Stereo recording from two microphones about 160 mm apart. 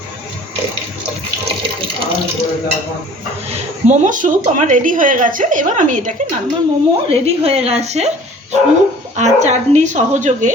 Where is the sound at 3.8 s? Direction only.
45° right (ahead or behind).